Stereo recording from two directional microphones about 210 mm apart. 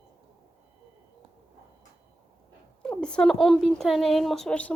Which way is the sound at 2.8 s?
5° left (ahead or behind).